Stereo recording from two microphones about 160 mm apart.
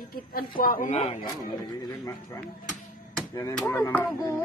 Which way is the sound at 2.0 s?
20° left (ahead or behind).